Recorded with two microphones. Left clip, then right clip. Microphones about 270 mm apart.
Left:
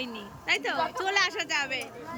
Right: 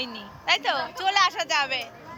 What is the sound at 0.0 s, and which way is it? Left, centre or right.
A woman's voice, centre.